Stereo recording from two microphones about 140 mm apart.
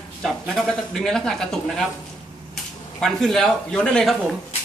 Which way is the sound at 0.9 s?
5° left (ahead or behind).